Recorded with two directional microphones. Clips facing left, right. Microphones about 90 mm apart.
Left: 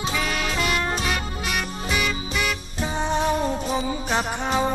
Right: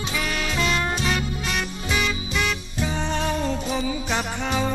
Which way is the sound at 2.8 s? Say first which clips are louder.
Left 2 dB; 15° left (ahead or behind).